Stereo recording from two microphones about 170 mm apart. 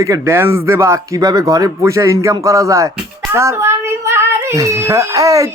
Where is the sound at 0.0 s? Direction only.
15° right (ahead or behind).